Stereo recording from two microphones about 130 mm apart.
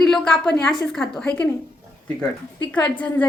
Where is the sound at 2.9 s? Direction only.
10° left (ahead or behind).